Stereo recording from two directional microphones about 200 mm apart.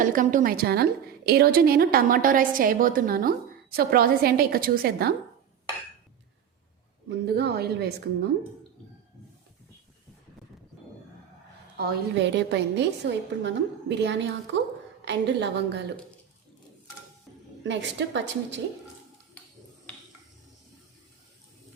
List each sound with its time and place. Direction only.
0.0 s a woman's voice: 40° right (ahead or behind)
7.3 s a woman's voice: 55° right (ahead or behind)
11.8 s a woman's voice: 55° right (ahead or behind)
17.6 s a woman's voice: 65° right (ahead or behind)